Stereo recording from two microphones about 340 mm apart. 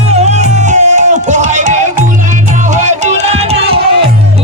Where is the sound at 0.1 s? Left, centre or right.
Centre.